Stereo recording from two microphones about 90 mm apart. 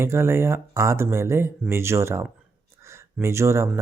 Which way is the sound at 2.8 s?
30° right (ahead or behind).